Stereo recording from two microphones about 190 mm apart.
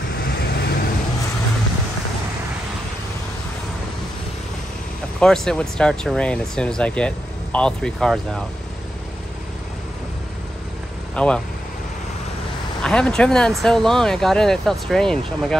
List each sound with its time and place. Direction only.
0.3 s vehicle: 55° left (ahead or behind)
5.2 s speech: 5° left (ahead or behind)
11.1 s speech: 5° left (ahead or behind)
12.8 s speech: 5° left (ahead or behind)